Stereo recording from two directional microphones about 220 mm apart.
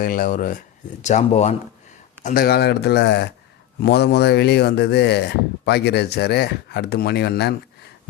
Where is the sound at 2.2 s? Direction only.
40° left (ahead or behind).